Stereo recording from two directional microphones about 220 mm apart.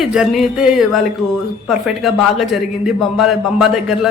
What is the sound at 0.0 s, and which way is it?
A woman's voice, centre (ahead or behind).